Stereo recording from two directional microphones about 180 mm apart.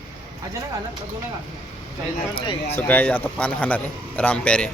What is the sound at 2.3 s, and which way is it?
Speech, 30° left (ahead or behind).